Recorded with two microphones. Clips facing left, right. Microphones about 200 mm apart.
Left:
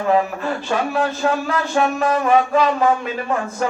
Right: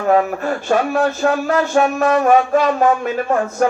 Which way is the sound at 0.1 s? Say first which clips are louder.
Right 4 dB; 45° right (ahead or behind).